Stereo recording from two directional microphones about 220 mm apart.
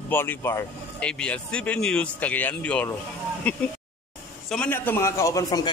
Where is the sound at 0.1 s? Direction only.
10° left (ahead or behind).